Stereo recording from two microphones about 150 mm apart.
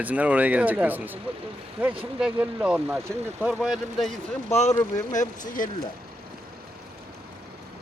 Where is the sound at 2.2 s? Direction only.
5° right (ahead or behind).